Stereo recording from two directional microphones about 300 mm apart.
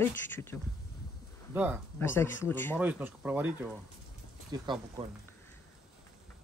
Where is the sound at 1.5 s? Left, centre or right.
Centre.